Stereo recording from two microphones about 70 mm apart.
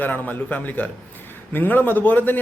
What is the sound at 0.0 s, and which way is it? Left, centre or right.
A man's voice, left.